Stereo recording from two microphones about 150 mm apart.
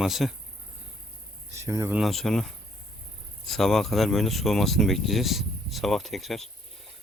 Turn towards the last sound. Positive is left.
turn(degrees=0)  # may be behind; listen again after turning